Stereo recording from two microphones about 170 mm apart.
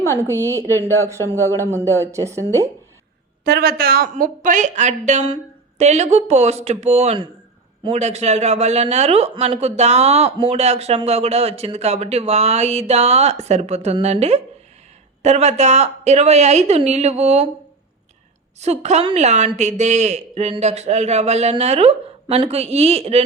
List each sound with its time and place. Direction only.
0.3 s a man's voice: 15° left (ahead or behind)
2.0 s a woman's voice: 15° right (ahead or behind)
3.4 s a woman's voice: 65° right (ahead or behind)
4.1 s speech: 50° right (ahead or behind)
18.6 s speech: 40° right (ahead or behind)